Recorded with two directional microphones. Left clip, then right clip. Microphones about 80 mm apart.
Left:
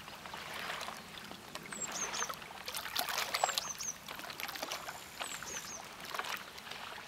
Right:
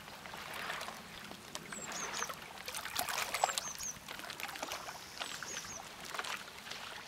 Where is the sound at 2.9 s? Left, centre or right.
Centre.